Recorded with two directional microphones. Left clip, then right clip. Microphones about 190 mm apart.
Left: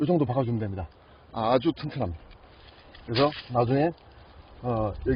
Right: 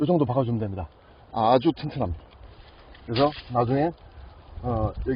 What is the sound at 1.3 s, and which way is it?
Speech, 30° right (ahead or behind).